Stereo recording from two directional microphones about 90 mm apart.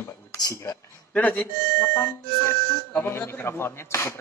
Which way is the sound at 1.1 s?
15° left (ahead or behind).